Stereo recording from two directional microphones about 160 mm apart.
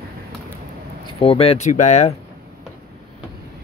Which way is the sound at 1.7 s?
50° left (ahead or behind).